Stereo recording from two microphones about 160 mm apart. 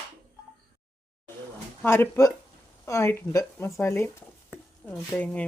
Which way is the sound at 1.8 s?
15° left (ahead or behind).